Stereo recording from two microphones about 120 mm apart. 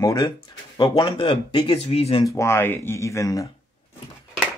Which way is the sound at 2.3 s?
20° left (ahead or behind).